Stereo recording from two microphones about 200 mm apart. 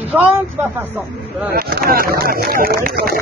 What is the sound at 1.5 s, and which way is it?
Speech, 50° right (ahead or behind).